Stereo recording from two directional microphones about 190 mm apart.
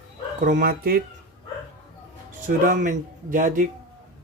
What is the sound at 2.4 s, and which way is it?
Speech, 45° right (ahead or behind).